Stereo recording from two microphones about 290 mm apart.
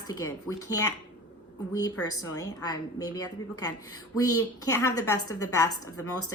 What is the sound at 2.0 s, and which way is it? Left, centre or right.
Speech, left.